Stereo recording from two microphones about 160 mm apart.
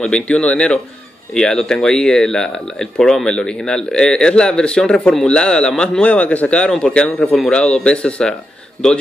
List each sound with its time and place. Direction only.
0.0 s speech: 5° left (ahead or behind)